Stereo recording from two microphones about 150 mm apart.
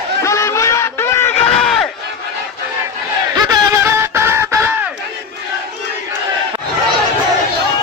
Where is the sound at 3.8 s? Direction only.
15° right (ahead or behind).